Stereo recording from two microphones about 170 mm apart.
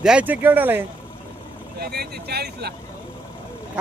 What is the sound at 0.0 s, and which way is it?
Speech, 5° right (ahead or behind).